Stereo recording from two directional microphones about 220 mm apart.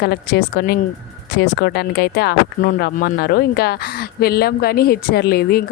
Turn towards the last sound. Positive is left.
turn(degrees=45)  # may be behind; listen again after turning